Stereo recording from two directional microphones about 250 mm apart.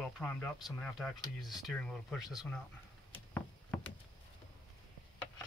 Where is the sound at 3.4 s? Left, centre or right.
Centre.